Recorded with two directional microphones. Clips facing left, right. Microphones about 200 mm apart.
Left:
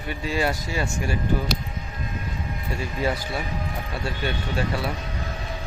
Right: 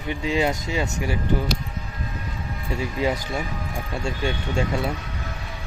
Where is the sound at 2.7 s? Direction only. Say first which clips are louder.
Right 2 dB; 15° right (ahead or behind).